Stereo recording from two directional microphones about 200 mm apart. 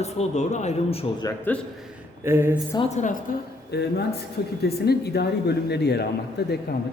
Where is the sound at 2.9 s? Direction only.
35° left (ahead or behind).